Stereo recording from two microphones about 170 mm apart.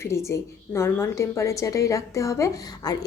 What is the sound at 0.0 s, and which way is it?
A woman's voice, 15° left (ahead or behind).